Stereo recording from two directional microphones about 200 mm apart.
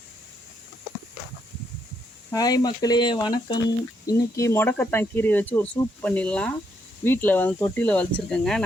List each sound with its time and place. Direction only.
2.3 s speech: 20° left (ahead or behind)